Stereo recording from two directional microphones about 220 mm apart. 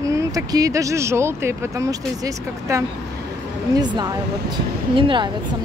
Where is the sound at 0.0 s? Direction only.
15° right (ahead or behind).